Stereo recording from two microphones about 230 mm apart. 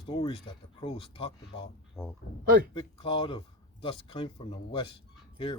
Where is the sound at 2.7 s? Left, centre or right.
Left.